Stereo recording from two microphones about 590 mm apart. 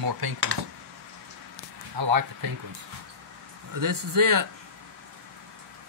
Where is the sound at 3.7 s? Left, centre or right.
Right.